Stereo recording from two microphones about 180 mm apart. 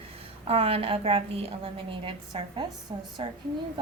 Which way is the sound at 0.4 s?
35° right (ahead or behind).